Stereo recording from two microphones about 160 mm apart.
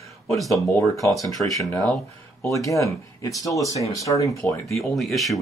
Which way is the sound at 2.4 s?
20° left (ahead or behind).